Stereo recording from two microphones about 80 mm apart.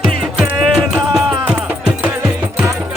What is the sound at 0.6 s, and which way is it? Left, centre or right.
Music, centre.